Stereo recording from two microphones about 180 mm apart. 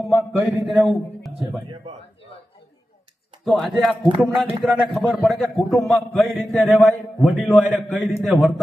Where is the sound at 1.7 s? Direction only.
35° right (ahead or behind).